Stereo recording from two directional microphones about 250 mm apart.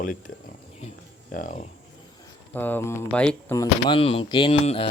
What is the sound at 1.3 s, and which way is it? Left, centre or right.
Speech, left.